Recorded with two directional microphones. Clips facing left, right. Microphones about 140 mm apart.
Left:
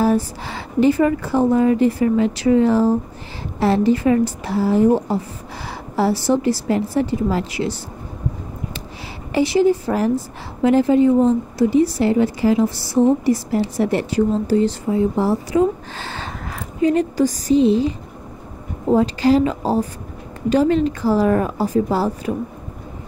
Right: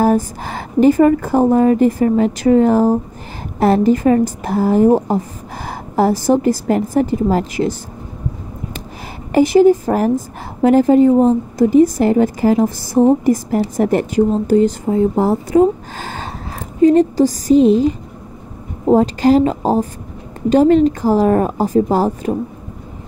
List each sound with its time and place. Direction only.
0.0 s a woman's voice: 50° right (ahead or behind)
9.3 s a woman's voice: 45° right (ahead or behind)